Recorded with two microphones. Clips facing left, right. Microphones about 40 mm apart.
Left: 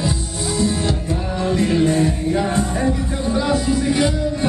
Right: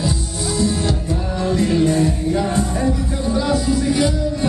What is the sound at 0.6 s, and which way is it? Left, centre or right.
Music, left.